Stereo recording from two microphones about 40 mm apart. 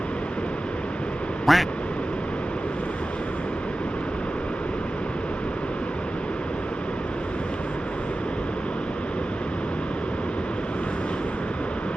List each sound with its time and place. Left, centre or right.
1.5 s speech: centre